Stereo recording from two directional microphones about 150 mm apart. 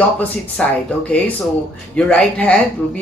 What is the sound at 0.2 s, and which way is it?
Speech, 10° left (ahead or behind).